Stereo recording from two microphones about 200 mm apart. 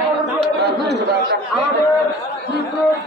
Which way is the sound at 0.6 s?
55° right (ahead or behind).